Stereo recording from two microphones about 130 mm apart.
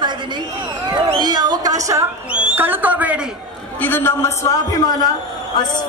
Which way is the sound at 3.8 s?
15° left (ahead or behind).